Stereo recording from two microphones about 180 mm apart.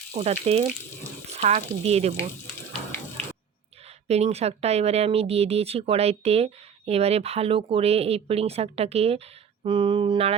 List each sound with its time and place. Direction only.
0.1 s speech: 35° right (ahead or behind)
3.8 s speech: 35° right (ahead or behind)